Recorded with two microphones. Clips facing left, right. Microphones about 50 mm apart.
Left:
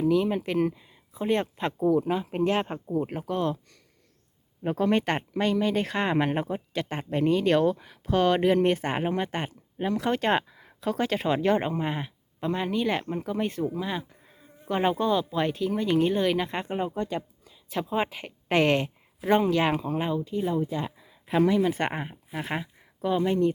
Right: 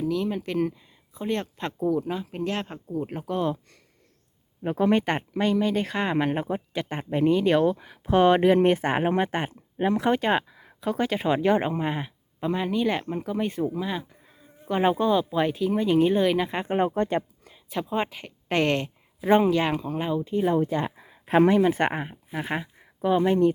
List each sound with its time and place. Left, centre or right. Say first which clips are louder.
0.0 s speech: left 3 dB; centre
4.8 s speech: right 2 dB; centre
8.0 s speech: right 4 dB; right
10.2 s speech: right 1 dB; centre
16.7 s speech: right 7 dB; right
17.7 s speech: even; centre
19.2 s speech: right 2 dB; centre
20.2 s speech: right 4 dB; right
20.5 s speech: right 4 dB; right
21.9 s speech: right 2 dB; centre; by 23.5 s right